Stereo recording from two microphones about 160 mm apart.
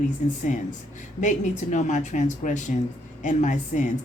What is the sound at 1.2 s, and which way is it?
Speech, 50° left (ahead or behind).